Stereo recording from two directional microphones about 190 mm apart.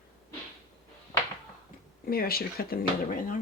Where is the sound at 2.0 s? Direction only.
50° left (ahead or behind).